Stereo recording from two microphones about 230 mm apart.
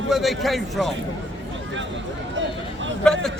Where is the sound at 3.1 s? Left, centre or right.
Centre.